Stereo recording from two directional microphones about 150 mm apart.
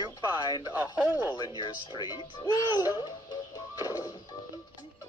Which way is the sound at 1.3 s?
30° left (ahead or behind).